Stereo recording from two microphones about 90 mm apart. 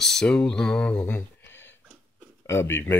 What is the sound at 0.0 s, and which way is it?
Speech, 5° left (ahead or behind).